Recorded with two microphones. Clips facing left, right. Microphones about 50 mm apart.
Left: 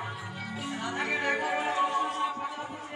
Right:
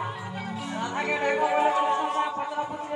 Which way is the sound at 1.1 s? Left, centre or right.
Right.